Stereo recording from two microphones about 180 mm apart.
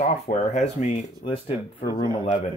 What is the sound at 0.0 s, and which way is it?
Speech, 40° left (ahead or behind).